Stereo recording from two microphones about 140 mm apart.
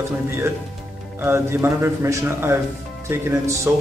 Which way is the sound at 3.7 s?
15° right (ahead or behind).